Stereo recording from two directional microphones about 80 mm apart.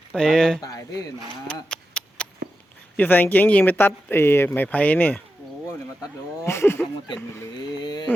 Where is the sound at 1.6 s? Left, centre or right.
Centre.